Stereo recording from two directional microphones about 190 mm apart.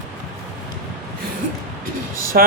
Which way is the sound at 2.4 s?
50° right (ahead or behind).